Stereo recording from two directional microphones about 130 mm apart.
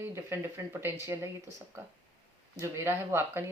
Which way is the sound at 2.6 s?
20° right (ahead or behind).